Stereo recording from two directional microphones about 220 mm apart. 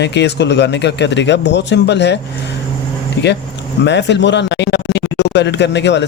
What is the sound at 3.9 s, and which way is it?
Speech, 55° left (ahead or behind).